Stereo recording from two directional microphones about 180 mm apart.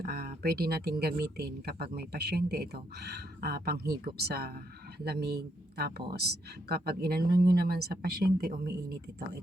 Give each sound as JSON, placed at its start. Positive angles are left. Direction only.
{"t": 0.0, "sound": "speech", "side_deg": -60}